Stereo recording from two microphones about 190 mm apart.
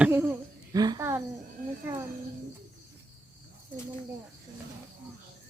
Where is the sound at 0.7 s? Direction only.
20° right (ahead or behind).